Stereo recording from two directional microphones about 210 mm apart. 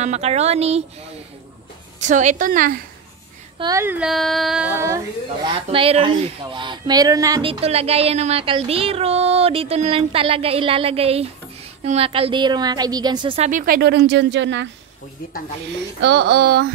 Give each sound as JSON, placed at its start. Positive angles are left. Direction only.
{"t": 0.0, "sound": "a woman's voice", "side_deg": -30}
{"t": 2.0, "sound": "a woman's voice", "side_deg": -35}
{"t": 3.5, "sound": "child singing", "side_deg": -15}
{"t": 5.5, "sound": "a sound", "side_deg": -25}
{"t": 7.6, "sound": "a sound", "side_deg": -30}
{"t": 13.5, "sound": "speech", "side_deg": -40}
{"t": 16.0, "sound": "speech", "side_deg": -55}